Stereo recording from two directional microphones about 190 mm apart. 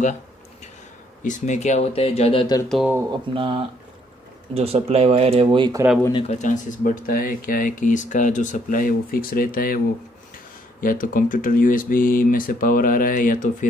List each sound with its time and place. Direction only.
1.2 s speech: 40° left (ahead or behind)
2.9 s speech: 15° right (ahead or behind)
3.3 s speech: 25° right (ahead or behind)
6.1 s speech: 35° left (ahead or behind)
10.8 s speech: 45° left (ahead or behind)